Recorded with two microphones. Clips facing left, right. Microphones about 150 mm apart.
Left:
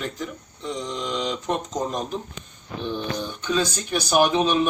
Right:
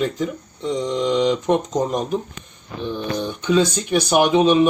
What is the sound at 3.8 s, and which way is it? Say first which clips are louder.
Speech: right 3 dB; 15° right (ahead or behind).